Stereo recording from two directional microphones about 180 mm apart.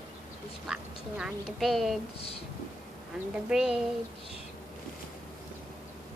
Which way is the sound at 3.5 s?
5° right (ahead or behind).